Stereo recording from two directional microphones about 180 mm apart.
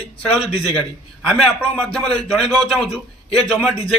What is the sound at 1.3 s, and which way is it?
A man's voice, 5° left (ahead or behind).